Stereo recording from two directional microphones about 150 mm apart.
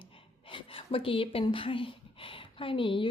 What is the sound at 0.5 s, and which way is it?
A woman's voice, 35° left (ahead or behind).